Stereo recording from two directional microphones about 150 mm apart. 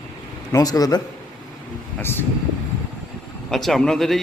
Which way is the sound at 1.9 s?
15° left (ahead or behind).